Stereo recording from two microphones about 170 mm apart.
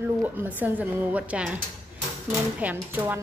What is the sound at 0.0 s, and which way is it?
A woman's voice, 10° right (ahead or behind).